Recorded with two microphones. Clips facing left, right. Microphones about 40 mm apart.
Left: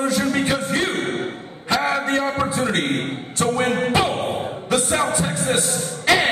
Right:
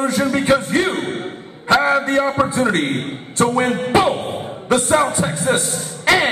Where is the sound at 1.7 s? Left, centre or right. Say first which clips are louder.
Right 6 dB; right.